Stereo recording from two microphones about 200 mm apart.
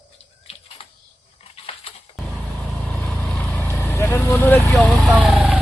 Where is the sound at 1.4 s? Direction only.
30° left (ahead or behind).